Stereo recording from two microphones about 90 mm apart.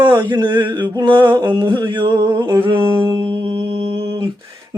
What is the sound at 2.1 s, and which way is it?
Humming, 30° right (ahead or behind).